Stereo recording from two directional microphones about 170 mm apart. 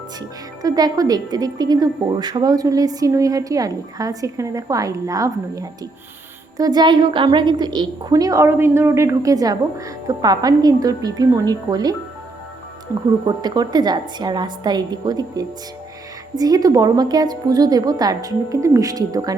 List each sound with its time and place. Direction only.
0.2 s a woman's voice: 20° right (ahead or behind)
13.2 s a woman's voice: 25° right (ahead or behind)